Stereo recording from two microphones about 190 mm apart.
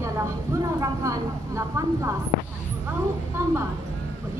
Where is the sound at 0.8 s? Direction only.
15° right (ahead or behind).